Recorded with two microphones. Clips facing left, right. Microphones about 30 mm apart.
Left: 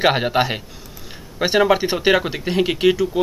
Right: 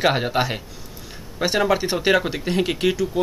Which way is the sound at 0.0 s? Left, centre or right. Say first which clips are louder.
Left 3 dB; centre.